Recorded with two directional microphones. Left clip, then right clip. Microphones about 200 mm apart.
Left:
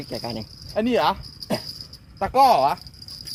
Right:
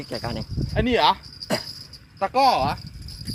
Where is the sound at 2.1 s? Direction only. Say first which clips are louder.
Left 2 dB; 60° left (ahead or behind).